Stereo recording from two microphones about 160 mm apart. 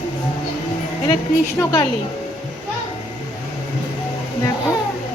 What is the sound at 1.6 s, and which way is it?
Speech, 20° left (ahead or behind).